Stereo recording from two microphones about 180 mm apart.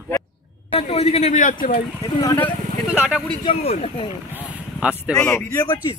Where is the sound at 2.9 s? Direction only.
5° right (ahead or behind).